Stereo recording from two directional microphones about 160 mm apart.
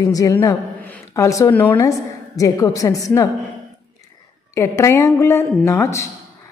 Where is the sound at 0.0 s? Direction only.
20° left (ahead or behind).